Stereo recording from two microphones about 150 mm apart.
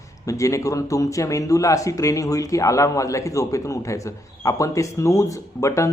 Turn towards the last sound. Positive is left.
turn(degrees=20)  # may be behind; listen again after turning